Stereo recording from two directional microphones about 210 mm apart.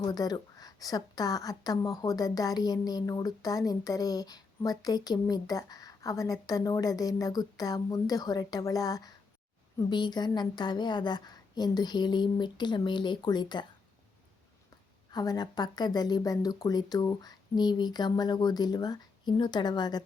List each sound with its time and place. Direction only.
0.1 s a woman's voice: 20° left (ahead or behind)
15.1 s a woman's voice: 20° left (ahead or behind)